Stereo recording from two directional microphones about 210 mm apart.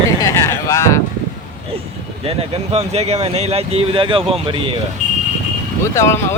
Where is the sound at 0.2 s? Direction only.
15° left (ahead or behind).